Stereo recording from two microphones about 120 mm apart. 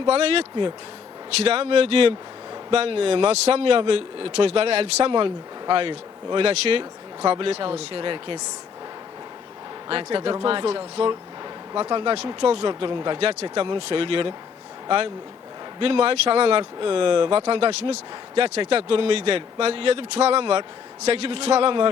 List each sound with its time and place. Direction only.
0.0 s speech: 55° right (ahead or behind)
1.5 s speech: 55° right (ahead or behind)
9.9 s speech: 45° right (ahead or behind)